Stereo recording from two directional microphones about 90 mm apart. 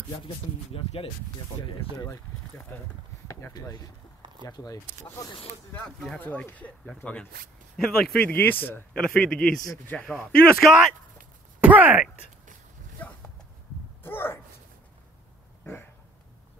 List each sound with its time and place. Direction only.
1.6 s speech: 80° left
2.7 s speech: 25° left (ahead or behind)
3.3 s a sound: 30° left (ahead or behind)
3.5 s speech: 45° left (ahead or behind)
5.9 s speech: 5° left (ahead or behind)
6.1 s speech: 20° left (ahead or behind)
8.3 s speech: 20° left (ahead or behind)
8.9 s speech: 10° left (ahead or behind)
10.1 s speech: 5° left (ahead or behind)
11.6 s speech: 15° right (ahead or behind)
14.0 s a sound: 25° left (ahead or behind)
15.6 s a sound: 25° left (ahead or behind)